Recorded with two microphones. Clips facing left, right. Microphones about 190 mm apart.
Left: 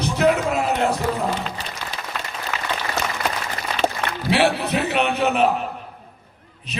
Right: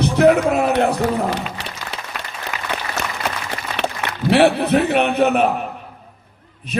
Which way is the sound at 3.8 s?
65° right (ahead or behind).